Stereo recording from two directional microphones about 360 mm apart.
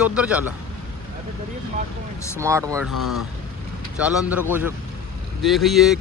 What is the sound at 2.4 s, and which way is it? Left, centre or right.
Speech, centre.